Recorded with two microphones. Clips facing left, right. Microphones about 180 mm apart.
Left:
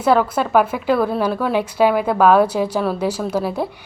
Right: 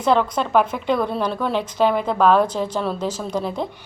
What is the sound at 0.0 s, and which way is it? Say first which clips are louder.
A woman's voice: left 2 dB; 5° left (ahead or behind).